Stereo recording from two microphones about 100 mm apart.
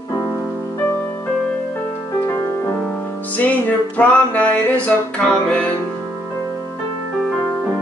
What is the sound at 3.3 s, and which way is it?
Music, 15° left (ahead or behind).